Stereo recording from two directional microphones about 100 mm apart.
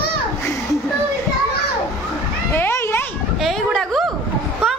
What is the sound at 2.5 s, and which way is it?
Children playing, 25° left (ahead or behind).